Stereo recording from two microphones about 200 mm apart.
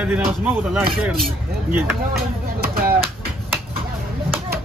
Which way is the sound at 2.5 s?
50° right (ahead or behind).